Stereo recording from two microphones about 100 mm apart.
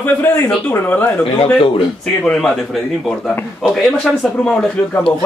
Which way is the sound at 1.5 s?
60° left (ahead or behind).